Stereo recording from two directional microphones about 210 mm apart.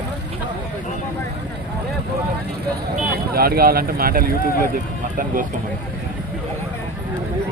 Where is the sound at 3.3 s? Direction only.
45° right (ahead or behind).